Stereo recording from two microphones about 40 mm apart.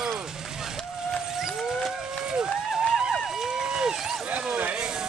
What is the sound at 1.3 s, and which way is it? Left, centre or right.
Vehicle, centre.